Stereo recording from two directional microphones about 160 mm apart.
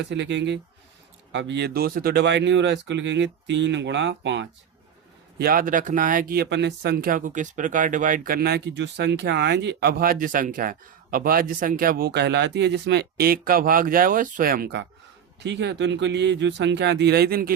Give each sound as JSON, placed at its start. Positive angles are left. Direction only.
{"t": 0.0, "sound": "speech", "side_deg": -90}
{"t": 5.4, "sound": "speech", "side_deg": -65}
{"t": 15.4, "sound": "speech", "side_deg": -90}